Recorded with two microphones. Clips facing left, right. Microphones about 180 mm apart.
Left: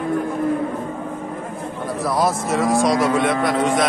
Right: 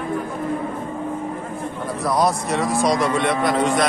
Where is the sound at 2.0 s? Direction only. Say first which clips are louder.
Even; centre (ahead or behind).